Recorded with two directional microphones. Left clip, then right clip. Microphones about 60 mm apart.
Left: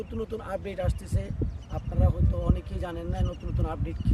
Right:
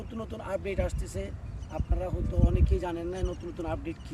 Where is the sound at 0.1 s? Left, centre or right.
Left.